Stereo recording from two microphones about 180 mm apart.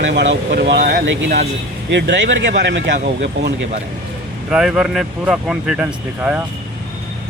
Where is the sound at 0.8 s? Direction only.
55° right (ahead or behind).